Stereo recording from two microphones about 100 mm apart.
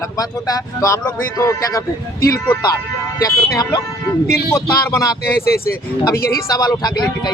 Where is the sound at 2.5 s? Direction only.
45° left (ahead or behind).